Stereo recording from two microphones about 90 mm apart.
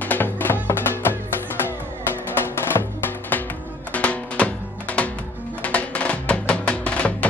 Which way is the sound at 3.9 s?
15° left (ahead or behind).